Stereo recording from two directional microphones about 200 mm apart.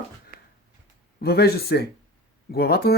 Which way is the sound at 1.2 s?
50° left (ahead or behind).